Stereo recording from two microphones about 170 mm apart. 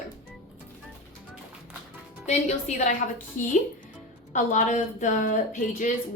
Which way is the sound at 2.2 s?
40° left (ahead or behind).